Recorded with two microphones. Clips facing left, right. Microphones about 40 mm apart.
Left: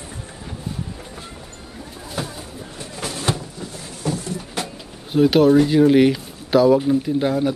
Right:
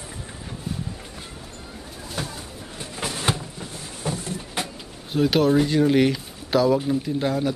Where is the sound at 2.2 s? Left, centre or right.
Centre.